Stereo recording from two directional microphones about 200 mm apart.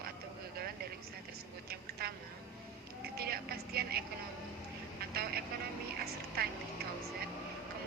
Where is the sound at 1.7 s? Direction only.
50° right (ahead or behind).